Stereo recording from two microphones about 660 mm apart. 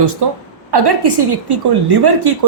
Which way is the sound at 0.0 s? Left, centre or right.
Right.